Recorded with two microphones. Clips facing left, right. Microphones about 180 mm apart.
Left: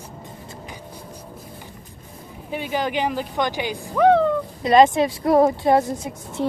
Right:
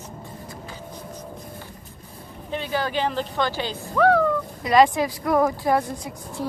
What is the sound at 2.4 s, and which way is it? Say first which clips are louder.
Speech: left 2 dB; 10° left (ahead or behind).